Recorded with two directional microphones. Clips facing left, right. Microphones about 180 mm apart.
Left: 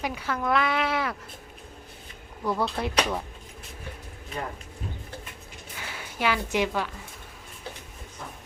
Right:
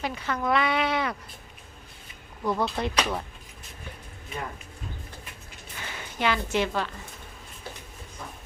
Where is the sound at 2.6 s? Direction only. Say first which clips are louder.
Even; 5° left (ahead or behind).